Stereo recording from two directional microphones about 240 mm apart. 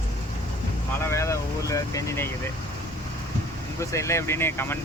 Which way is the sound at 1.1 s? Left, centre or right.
Centre.